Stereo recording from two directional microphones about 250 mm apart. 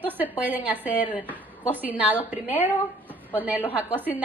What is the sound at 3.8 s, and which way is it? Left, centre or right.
Speech, centre.